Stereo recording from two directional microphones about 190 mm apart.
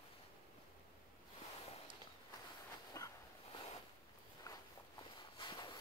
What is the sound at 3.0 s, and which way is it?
Dog, 15° left (ahead or behind).